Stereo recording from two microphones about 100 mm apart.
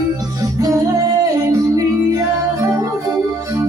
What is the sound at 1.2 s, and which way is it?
Music, 35° right (ahead or behind).